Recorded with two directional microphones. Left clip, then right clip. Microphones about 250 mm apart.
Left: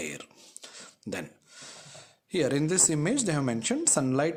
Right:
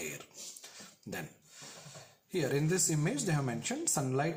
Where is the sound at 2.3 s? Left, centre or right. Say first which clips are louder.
Left 6 dB; left.